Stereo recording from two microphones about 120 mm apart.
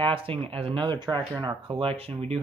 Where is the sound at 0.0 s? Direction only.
45° right (ahead or behind).